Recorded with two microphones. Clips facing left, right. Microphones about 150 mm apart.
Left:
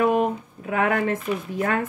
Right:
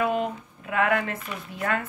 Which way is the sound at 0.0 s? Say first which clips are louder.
Left 5 dB; 45° left (ahead or behind).